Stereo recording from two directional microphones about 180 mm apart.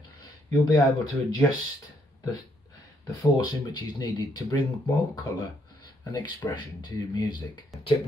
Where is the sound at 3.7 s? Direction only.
25° left (ahead or behind).